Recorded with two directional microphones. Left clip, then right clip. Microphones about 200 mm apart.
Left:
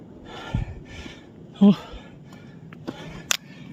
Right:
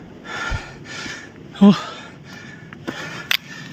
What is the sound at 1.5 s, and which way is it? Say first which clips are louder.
Speech: right 5 dB; 5° right (ahead or behind).